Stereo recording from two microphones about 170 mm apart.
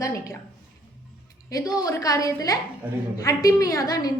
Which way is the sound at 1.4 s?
20° left (ahead or behind).